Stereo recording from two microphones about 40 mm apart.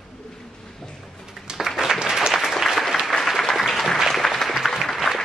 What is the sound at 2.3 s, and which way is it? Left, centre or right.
Applause, centre.